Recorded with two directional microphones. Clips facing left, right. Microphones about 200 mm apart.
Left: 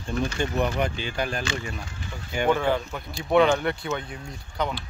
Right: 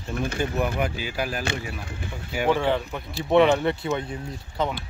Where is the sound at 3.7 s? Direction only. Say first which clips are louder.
Right 2 dB; 25° right (ahead or behind).